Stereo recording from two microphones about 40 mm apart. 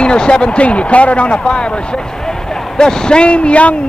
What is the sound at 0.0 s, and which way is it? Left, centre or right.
Speech, left.